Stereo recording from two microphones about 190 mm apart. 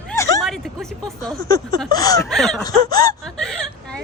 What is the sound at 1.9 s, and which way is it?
Snicker, 20° left (ahead or behind).